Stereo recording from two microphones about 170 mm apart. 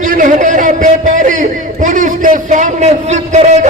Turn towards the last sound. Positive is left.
turn(degrees=-40)  # may be behind; listen again after turning